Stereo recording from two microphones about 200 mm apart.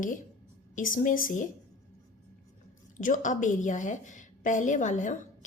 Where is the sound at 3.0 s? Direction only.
40° left (ahead or behind).